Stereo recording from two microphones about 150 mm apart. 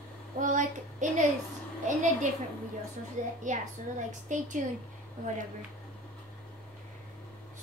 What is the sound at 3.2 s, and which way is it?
A woman's voice, 55° right (ahead or behind).